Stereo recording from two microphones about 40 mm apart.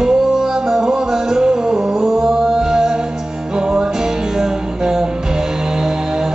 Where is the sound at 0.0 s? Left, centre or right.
Centre.